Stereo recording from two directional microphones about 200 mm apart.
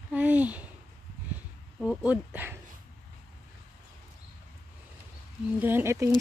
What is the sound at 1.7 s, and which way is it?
Speech, 5° right (ahead or behind).